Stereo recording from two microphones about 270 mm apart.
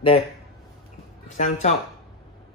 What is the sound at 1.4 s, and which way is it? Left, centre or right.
Speech, left.